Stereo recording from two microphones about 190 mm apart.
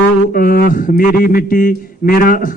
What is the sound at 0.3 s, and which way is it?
Speech, 50° left (ahead or behind).